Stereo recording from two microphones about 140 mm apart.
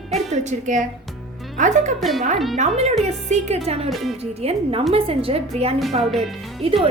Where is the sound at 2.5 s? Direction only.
50° right (ahead or behind).